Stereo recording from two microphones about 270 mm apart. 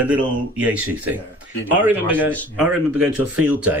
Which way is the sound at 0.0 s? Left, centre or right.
Centre.